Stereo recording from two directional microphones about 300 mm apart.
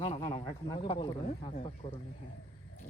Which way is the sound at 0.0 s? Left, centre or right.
Centre.